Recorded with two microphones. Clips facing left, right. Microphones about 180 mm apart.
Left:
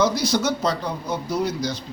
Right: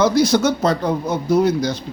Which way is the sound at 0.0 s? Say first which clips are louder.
Right 6 dB; 50° right (ahead or behind).